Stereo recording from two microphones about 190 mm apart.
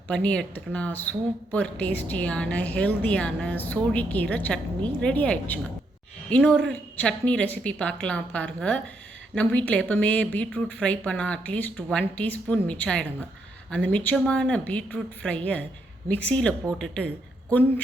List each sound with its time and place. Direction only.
0.1 s a woman's voice: 5° left (ahead or behind)